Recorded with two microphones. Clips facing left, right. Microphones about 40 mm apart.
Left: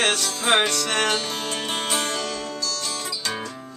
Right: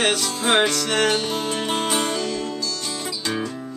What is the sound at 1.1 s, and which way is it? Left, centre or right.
Music, centre.